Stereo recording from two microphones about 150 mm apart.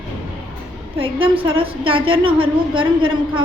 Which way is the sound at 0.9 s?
35° right (ahead or behind).